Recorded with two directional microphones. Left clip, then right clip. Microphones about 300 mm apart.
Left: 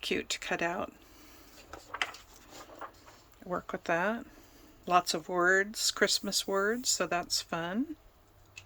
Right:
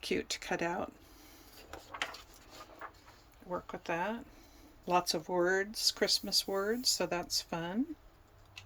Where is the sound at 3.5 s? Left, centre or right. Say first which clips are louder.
Left 5 dB; centre.